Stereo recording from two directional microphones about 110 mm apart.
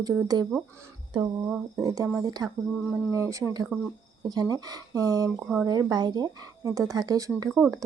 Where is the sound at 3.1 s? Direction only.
30° right (ahead or behind).